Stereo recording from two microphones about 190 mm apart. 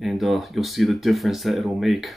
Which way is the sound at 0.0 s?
Centre (ahead or behind).